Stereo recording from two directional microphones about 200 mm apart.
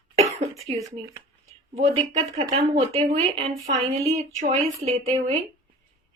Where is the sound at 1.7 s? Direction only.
35° right (ahead or behind).